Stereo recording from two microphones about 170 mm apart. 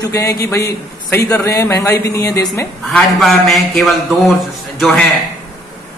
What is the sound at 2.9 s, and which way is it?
A man's voice, centre (ahead or behind).